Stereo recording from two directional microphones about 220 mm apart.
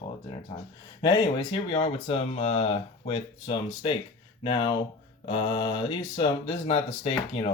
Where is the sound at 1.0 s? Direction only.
20° left (ahead or behind).